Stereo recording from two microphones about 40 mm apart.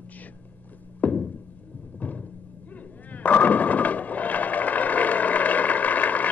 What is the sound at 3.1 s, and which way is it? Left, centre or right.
Skateboard, left.